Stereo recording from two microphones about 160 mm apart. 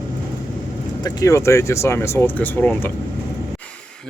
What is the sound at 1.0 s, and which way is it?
Speech, 20° left (ahead or behind).